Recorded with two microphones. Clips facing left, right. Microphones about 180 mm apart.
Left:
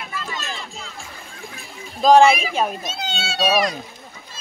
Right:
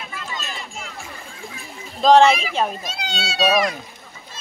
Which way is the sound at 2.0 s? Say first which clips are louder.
Even; 5° left (ahead or behind).